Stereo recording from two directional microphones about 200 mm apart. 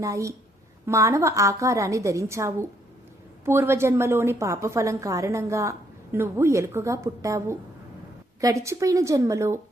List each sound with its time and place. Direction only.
0.0 s a woman's voice: 15° right (ahead or behind)